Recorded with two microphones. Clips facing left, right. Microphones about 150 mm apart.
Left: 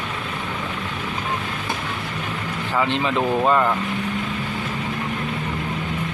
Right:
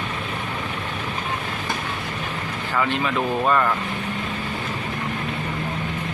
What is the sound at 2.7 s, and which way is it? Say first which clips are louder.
Speech: left 2 dB; 25° left (ahead or behind).